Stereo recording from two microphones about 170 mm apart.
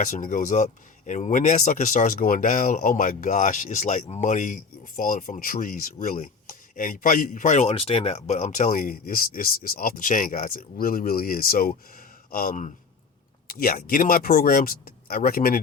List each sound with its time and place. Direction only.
0.0 s speech: 50° left (ahead or behind)